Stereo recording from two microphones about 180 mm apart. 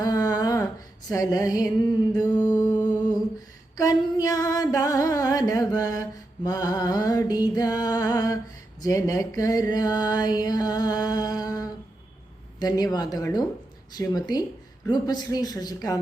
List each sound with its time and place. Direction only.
0.0 s a sound: 20° left (ahead or behind)
1.1 s music: 20° left (ahead or behind)
2.4 s mantra: 10° left (ahead or behind)
3.8 s music: 20° left (ahead or behind)
8.8 s mantra: 15° left (ahead or behind)
12.5 s music: 20° left (ahead or behind)